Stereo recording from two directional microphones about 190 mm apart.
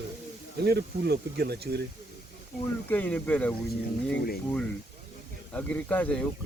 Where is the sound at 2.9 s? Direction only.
10° left (ahead or behind).